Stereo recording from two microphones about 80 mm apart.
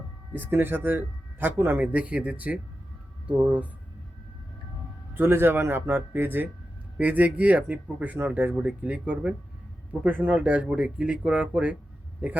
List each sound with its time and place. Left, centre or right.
0.3 s speech: right
5.1 s speech: right
12.2 s speech: right